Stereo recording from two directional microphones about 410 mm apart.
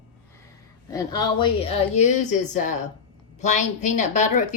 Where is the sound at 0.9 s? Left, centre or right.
Centre.